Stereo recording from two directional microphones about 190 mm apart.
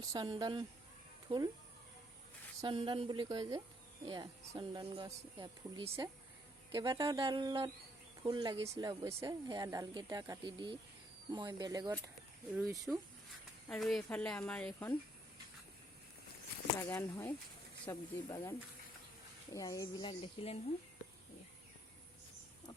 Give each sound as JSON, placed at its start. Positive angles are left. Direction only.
{"t": 0.0, "sound": "speech", "side_deg": -20}
{"t": 2.6, "sound": "speech", "side_deg": -25}
{"t": 13.7, "sound": "speech", "side_deg": 0}
{"t": 16.9, "sound": "speech", "side_deg": 10}
{"t": 19.5, "sound": "speech", "side_deg": 15}